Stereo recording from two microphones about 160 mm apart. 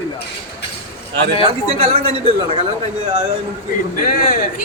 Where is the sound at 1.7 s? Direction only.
40° right (ahead or behind).